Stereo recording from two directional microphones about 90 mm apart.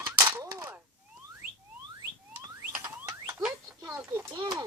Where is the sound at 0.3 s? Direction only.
25° right (ahead or behind).